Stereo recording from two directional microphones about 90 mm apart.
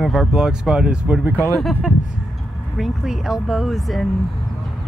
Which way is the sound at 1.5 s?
Centre (ahead or behind).